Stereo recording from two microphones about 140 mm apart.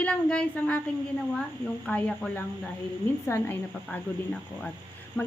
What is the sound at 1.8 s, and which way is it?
Speech, 10° left (ahead or behind).